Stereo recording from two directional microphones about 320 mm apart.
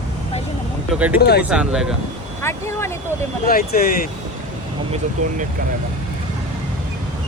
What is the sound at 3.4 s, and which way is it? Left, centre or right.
Speech, left.